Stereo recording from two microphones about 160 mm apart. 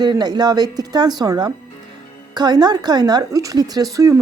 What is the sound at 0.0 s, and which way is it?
A woman's voice, 25° right (ahead or behind).